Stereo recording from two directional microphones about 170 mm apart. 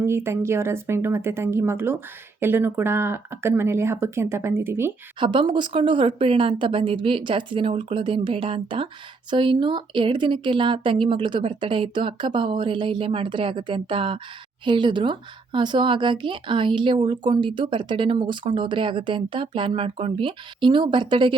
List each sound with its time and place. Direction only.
0.0 s speech: 15° right (ahead or behind)
5.2 s speech: 30° right (ahead or behind)